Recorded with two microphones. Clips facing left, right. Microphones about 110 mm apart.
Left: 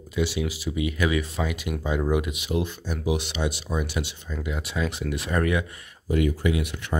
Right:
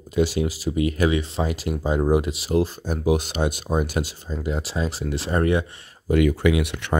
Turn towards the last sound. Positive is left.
turn(degrees=-70)  # may be behind; listen again after turning